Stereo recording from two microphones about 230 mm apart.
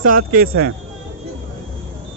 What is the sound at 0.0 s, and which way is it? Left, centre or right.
Speech, right.